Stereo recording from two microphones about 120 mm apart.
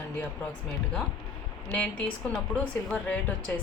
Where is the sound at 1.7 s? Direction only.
10° left (ahead or behind).